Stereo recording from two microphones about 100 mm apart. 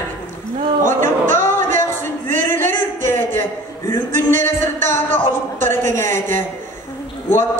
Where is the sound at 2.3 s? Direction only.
20° left (ahead or behind).